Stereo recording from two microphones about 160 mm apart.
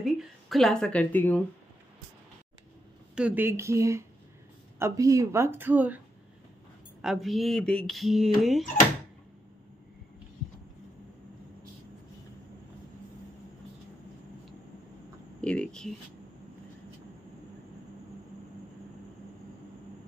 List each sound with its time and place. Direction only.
0.0 s speech: centre (ahead or behind)
3.2 s speech: 10° right (ahead or behind)
7.0 s mantra: centre (ahead or behind)
15.4 s a sound: 5° left (ahead or behind)